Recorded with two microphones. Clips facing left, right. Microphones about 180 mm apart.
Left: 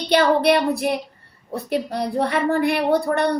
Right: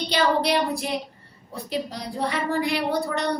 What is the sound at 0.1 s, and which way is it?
A woman's voice, 60° left (ahead or behind).